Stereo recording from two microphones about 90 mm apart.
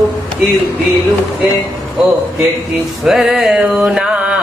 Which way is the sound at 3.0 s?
5° right (ahead or behind).